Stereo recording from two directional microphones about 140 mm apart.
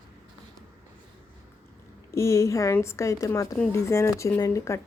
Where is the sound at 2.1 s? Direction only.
20° left (ahead or behind).